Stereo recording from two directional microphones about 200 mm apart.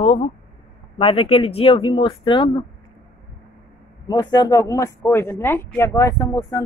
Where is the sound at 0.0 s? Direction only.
35° left (ahead or behind).